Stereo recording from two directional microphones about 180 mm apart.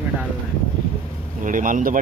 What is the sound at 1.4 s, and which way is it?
Speech, 50° right (ahead or behind).